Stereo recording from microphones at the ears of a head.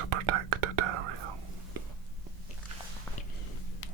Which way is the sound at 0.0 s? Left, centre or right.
Right.